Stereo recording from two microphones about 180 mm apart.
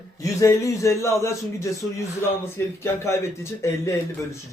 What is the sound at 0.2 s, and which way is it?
Speech, 20° left (ahead or behind).